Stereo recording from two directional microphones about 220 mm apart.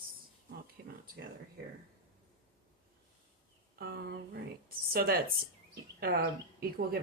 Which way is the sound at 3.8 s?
45° right (ahead or behind).